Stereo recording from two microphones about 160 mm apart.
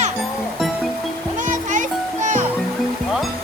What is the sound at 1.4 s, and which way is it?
Music, 50° right (ahead or behind).